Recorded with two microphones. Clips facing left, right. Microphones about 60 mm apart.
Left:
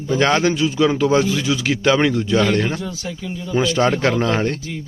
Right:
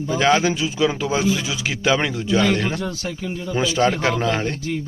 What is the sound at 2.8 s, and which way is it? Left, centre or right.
Speech, right.